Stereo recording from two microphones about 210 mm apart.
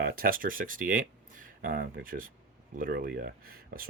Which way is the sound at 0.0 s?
45° right (ahead or behind).